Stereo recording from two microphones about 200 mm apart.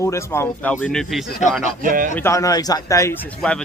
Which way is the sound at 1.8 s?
45° right (ahead or behind).